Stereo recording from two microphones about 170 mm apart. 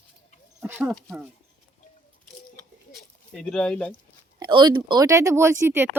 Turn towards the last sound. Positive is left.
turn(degrees=-15)  # may be behind; listen again after turning